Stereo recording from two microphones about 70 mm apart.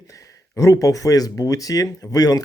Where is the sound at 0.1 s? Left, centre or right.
Left.